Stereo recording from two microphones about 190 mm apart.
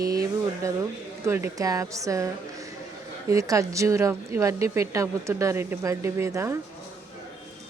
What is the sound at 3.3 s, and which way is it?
Speech, 15° right (ahead or behind).